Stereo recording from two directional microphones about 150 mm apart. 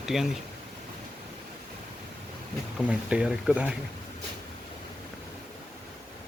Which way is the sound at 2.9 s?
5° right (ahead or behind).